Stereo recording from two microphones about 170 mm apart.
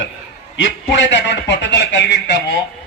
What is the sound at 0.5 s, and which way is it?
A man's voice, 90° left.